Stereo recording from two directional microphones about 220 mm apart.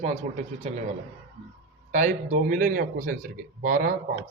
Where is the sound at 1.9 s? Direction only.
35° right (ahead or behind).